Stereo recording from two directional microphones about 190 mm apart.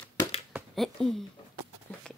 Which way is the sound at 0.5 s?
5° right (ahead or behind).